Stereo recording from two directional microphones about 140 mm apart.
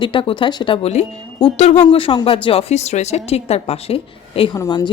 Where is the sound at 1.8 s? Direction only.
40° left (ahead or behind).